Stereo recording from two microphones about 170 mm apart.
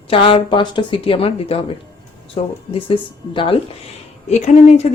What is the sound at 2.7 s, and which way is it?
Speech, 30° left (ahead or behind).